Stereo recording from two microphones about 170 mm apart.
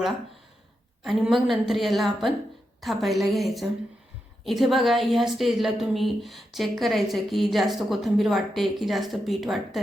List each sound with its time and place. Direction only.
1.0 s a woman's voice: centre (ahead or behind)